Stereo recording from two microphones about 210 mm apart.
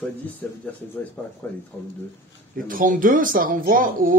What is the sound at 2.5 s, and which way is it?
Speech, 40° right (ahead or behind).